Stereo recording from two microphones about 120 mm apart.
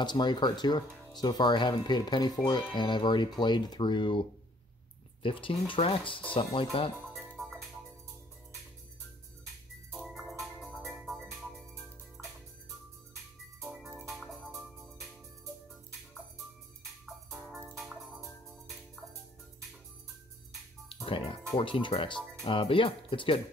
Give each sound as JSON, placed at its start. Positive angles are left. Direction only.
{"t": 0.0, "sound": "speech", "side_deg": 40}
{"t": 7.4, "sound": "music", "side_deg": 5}
{"t": 9.9, "sound": "music", "side_deg": 0}
{"t": 14.0, "sound": "music", "side_deg": 0}
{"t": 17.0, "sound": "music", "side_deg": 0}
{"t": 20.9, "sound": "music", "side_deg": 45}
{"t": 21.5, "sound": "speech", "side_deg": 45}